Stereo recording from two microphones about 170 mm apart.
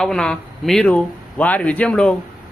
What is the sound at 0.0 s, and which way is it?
Speech, 5° left (ahead or behind).